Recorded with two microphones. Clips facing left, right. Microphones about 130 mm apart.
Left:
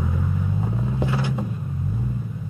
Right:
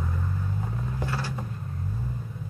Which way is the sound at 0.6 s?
20° left (ahead or behind).